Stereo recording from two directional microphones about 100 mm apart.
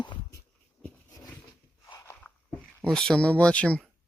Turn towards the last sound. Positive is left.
turn(degrees=10)  # may be behind; listen again after turning